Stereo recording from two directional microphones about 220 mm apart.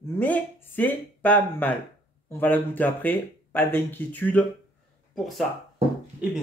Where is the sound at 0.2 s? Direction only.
10° left (ahead or behind).